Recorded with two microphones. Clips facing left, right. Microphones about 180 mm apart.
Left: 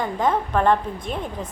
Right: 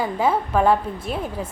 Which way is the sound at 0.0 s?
5° right (ahead or behind).